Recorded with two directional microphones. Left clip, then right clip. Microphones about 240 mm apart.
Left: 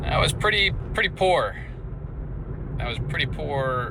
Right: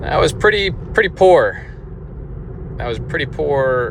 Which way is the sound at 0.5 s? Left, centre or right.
Right.